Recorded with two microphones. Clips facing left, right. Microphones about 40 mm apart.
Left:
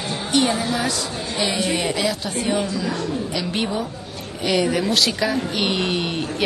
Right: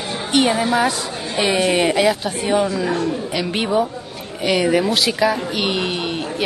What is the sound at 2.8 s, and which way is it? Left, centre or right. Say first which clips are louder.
A woman's voice: right 4 dB; right.